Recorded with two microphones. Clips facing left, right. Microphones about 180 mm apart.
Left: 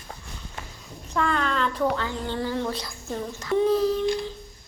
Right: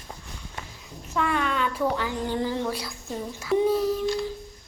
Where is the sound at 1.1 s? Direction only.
5° right (ahead or behind).